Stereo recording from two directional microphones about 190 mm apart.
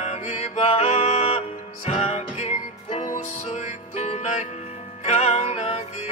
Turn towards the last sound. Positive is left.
turn(degrees=35)  # may be behind; listen again after turning